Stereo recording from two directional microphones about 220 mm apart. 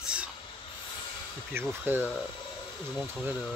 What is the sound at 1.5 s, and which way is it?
Speech, 10° right (ahead or behind).